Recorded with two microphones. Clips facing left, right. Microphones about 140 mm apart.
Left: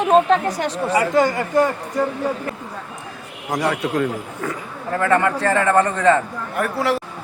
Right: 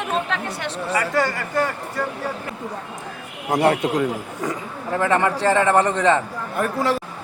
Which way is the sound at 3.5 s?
30° right (ahead or behind).